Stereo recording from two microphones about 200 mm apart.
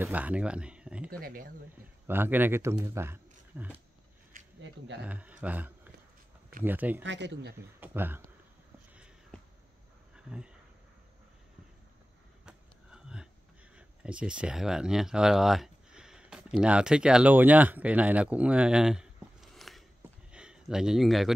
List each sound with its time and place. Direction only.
0.0 s speech: 5° right (ahead or behind)
1.2 s speech: 45° right (ahead or behind)
2.0 s speech: 10° right (ahead or behind)
5.0 s speech: 5° right (ahead or behind)
7.0 s speech: 65° right (ahead or behind)
7.8 s speech: 10° right (ahead or behind)
8.9 s a sound: 5° right (ahead or behind)
10.1 s dog: 5° right (ahead or behind)
12.4 s a sound: 5° right (ahead or behind)
13.7 s speech: 5° right (ahead or behind)
20.2 s a sound: 5° right (ahead or behind)